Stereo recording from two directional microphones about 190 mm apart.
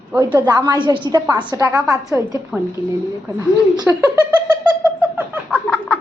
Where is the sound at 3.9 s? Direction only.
10° right (ahead or behind).